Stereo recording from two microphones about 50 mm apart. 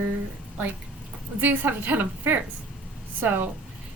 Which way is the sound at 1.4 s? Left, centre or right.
Right.